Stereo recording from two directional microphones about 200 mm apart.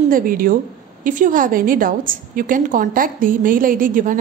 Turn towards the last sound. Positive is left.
turn(degrees=-40)  # may be behind; listen again after turning